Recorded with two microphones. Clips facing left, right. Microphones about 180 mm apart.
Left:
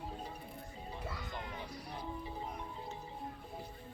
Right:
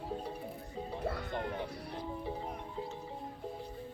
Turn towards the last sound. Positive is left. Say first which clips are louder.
# right 4 dB
turn(degrees=-60)  # may be behind; listen again after turning